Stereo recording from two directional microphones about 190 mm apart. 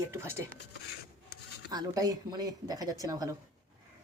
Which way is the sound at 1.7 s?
20° right (ahead or behind).